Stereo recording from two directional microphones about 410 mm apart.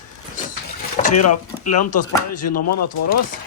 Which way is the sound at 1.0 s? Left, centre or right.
Left.